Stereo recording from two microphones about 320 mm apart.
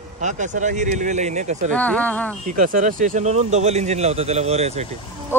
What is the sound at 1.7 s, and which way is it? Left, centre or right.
Speech, centre.